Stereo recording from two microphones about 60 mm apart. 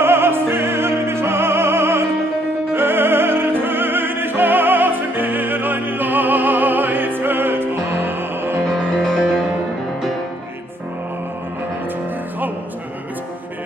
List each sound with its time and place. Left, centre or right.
0.0 s music: right
2.7 s opera: right
8.9 s music: centre